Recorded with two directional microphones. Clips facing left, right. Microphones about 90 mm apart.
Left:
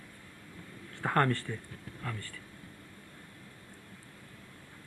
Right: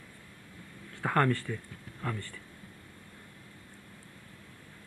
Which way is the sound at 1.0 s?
5° right (ahead or behind).